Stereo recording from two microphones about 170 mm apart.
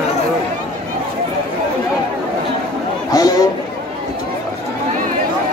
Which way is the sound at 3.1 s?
20° left (ahead or behind).